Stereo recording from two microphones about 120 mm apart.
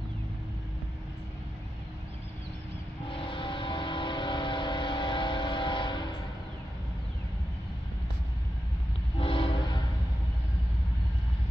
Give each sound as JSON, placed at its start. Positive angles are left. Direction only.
{"t": 3.1, "sound": "vehicle", "side_deg": 45}
{"t": 9.2, "sound": "train", "side_deg": 50}